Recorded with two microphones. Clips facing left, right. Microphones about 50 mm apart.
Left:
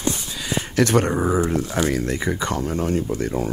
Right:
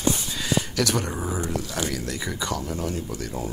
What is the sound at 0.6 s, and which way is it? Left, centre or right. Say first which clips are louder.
Speech: left 7 dB; left.